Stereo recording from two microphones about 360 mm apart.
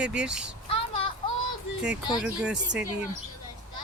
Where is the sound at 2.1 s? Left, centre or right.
Centre.